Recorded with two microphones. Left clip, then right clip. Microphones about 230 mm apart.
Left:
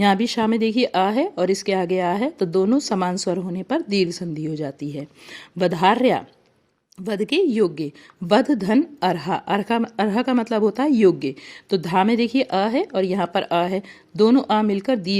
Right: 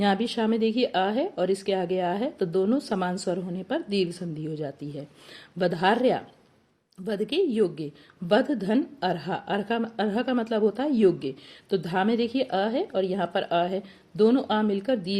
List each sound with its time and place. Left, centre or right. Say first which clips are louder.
0.0 s speech: left 6 dB; left